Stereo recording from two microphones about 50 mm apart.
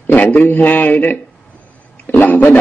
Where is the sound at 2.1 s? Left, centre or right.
Left.